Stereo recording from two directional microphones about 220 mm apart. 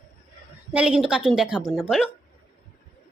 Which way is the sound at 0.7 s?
5° right (ahead or behind).